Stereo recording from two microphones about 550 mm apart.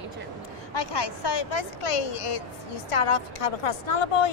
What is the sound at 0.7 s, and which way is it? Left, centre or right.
A woman's voice, left.